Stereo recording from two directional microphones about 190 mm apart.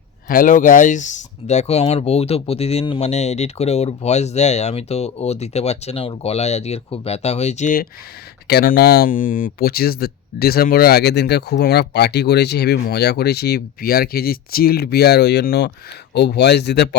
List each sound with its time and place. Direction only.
0.3 s speech: 45° left (ahead or behind)
8.4 s speech: 55° left (ahead or behind)